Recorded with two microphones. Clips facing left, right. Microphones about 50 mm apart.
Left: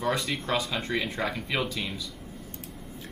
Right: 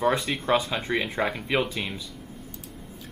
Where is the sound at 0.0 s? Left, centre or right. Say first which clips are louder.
Right 4 dB; centre.